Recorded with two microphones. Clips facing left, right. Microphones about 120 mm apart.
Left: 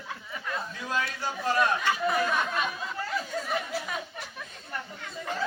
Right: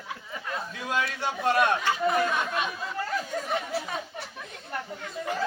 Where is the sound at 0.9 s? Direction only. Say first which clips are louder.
Right 3 dB; 70° right (ahead or behind).